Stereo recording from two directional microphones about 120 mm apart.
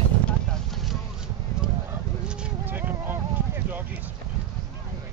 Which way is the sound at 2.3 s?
10° right (ahead or behind).